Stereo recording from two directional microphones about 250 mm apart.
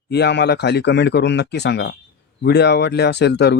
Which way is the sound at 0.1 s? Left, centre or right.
Left.